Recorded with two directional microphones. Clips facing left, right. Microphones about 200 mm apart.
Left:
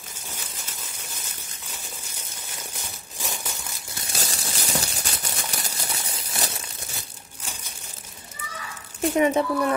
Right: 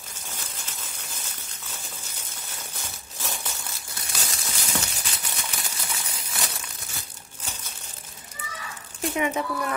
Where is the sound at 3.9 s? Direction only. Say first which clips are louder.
Left 4 dB; 25° left (ahead or behind).